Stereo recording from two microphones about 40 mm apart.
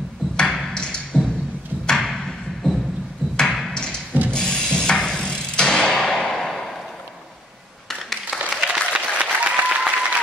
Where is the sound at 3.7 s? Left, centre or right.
Left.